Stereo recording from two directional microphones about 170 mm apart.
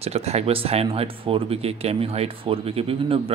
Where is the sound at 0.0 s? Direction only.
40° right (ahead or behind).